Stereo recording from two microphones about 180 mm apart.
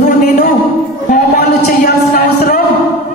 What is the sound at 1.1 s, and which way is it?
Speech, 55° left (ahead or behind).